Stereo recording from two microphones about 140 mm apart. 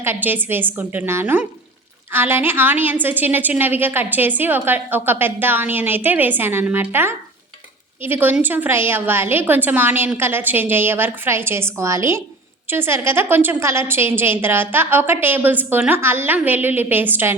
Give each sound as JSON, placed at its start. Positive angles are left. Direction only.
{"t": 0.0, "sound": "a woman's voice", "side_deg": -15}